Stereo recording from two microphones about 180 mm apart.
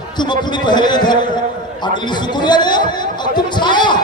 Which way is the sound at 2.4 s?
25° left (ahead or behind).